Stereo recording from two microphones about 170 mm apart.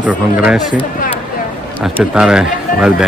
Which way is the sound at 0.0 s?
10° right (ahead or behind).